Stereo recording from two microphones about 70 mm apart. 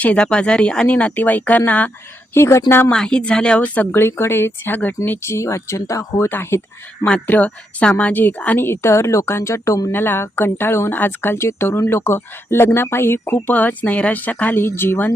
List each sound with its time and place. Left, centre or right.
0.0 s speech: centre
2.3 s speech: left
2.9 s speech: centre
3.9 s speech: left
6.3 s speech: left
7.3 s speech: centre
8.6 s speech: left
9.9 s speech: left